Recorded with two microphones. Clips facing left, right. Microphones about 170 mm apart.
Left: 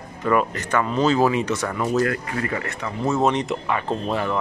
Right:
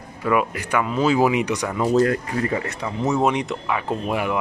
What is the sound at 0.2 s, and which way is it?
Speech, 10° right (ahead or behind).